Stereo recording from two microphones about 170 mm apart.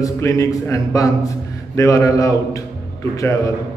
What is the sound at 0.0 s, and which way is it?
A man's voice, 20° left (ahead or behind).